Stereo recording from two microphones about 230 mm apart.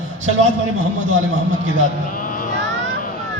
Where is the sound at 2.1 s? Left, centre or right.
Left.